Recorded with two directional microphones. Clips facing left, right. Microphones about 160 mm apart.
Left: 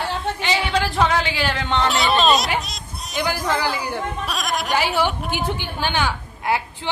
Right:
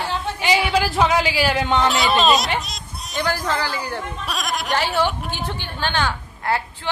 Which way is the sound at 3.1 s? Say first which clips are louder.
Even; 15° left (ahead or behind).